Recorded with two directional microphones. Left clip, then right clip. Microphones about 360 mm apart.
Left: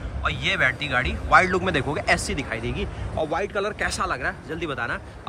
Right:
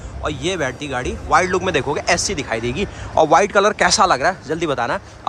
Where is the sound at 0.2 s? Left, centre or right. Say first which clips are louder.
Right 1 dB; centre.